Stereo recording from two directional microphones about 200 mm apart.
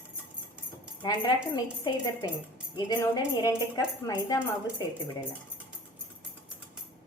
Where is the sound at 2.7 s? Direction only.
20° left (ahead or behind).